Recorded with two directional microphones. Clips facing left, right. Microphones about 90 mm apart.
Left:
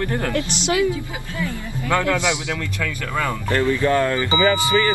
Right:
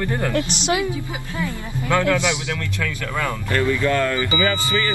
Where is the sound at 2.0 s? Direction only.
20° left (ahead or behind).